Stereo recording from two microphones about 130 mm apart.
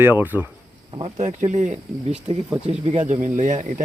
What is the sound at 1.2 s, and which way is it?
Speech, 65° right (ahead or behind).